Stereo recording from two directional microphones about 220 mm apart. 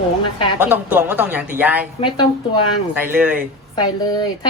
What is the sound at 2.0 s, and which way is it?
Speech, 25° left (ahead or behind).